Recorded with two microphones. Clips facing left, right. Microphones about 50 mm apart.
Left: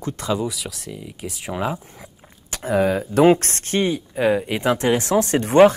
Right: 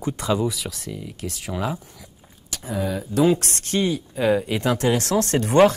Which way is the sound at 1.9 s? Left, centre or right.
Left.